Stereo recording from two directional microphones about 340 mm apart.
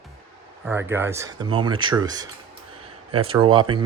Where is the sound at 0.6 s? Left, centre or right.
Centre.